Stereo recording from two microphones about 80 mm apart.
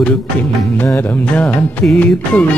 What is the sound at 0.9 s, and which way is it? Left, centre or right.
Music, centre.